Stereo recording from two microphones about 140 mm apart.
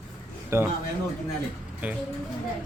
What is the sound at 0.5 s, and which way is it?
Speech, 20° right (ahead or behind).